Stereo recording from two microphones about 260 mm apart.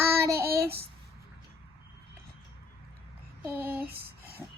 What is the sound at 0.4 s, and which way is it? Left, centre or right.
Child singing, right.